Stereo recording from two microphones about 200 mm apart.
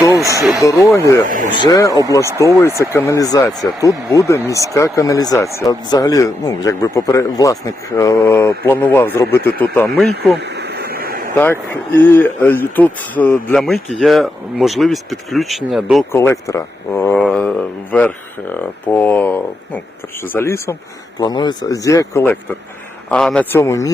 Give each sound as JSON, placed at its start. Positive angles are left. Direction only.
{"t": 0.2, "sound": "speech", "side_deg": -15}
{"t": 0.9, "sound": "speech", "side_deg": 15}
{"t": 10.3, "sound": "a sound", "side_deg": -55}
{"t": 11.3, "sound": "speech", "side_deg": 10}
{"t": 16.1, "sound": "speech", "side_deg": 15}